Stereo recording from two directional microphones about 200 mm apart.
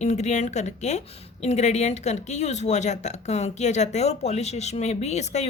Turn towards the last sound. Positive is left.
turn(degrees=35)  # may be behind; listen again after turning